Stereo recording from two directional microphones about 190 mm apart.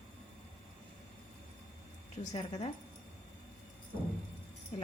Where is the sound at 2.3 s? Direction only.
35° left (ahead or behind).